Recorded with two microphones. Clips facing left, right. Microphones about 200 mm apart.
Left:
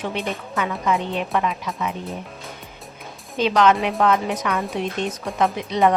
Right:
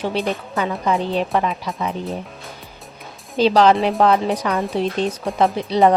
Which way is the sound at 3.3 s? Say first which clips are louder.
Right 4 dB; 35° right (ahead or behind).